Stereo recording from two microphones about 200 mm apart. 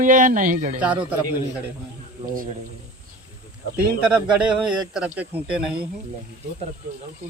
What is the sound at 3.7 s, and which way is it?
A man's voice, 5° right (ahead or behind).